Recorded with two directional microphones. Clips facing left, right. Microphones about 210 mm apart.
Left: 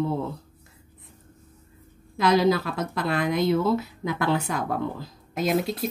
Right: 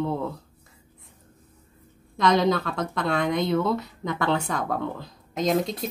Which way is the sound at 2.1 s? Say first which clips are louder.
Left 1 dB; 5° left (ahead or behind).